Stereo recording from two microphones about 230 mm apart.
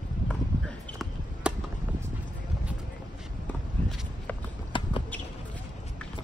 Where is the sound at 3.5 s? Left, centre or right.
Centre.